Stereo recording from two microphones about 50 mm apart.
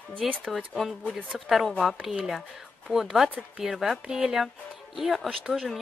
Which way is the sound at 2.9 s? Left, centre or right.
Centre.